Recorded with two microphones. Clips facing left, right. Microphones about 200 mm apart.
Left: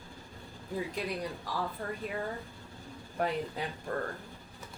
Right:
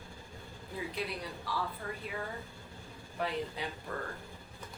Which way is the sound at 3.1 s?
45° left (ahead or behind).